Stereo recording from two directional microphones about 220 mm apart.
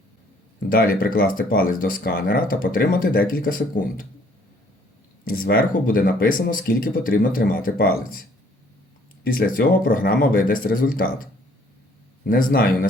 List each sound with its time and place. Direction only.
0.7 s speech: 40° left (ahead or behind)
5.2 s speech: 40° left (ahead or behind)
9.2 s a man's voice: 40° left (ahead or behind)